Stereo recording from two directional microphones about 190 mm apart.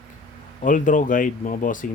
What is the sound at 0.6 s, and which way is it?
Speech, 45° left (ahead or behind).